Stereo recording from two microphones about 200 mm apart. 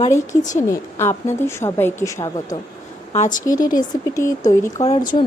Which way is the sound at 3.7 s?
15° left (ahead or behind).